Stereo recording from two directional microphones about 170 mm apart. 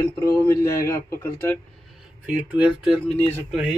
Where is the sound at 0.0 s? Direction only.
15° left (ahead or behind).